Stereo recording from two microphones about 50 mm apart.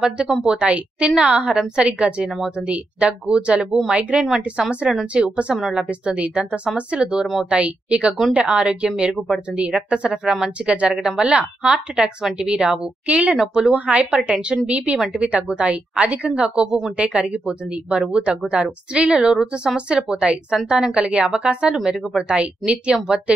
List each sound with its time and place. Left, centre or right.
0.0 s a woman's voice: centre
5.6 s speech: centre
5.9 s a woman's voice: right
9.1 s speech: centre
9.8 s a woman's voice: right
13.4 s speech: centre
13.7 s a woman's voice: right